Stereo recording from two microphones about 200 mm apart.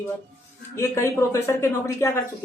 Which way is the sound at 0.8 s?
15° left (ahead or behind).